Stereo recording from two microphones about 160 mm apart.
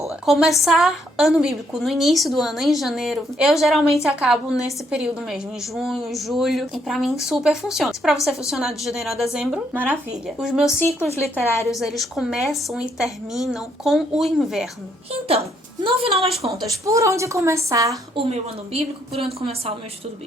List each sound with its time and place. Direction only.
0.1 s a woman's voice: centre (ahead or behind)
15.1 s a woman's voice: 40° right (ahead or behind)
16.8 s a woman's voice: 20° right (ahead or behind)
18.2 s a woman's voice: 40° right (ahead or behind)